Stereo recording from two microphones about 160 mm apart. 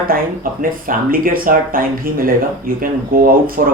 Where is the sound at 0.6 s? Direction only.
60° right (ahead or behind).